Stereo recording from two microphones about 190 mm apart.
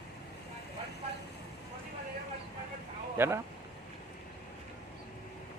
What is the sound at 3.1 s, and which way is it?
Speech, 10° right (ahead or behind).